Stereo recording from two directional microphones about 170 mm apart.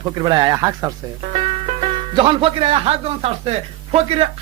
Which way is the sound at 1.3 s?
40° right (ahead or behind).